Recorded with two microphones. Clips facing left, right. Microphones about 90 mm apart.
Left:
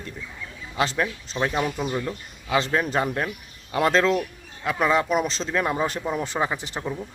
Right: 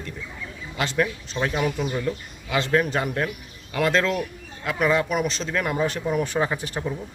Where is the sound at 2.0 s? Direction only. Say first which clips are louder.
Right 3 dB; 30° left (ahead or behind).